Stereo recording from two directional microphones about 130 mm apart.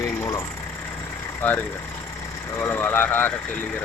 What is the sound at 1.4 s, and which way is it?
Speech, 15° left (ahead or behind).